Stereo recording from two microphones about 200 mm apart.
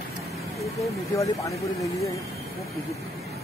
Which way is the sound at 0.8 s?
15° left (ahead or behind).